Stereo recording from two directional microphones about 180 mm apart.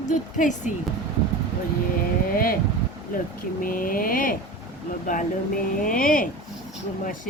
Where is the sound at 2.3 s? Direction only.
50° left (ahead or behind).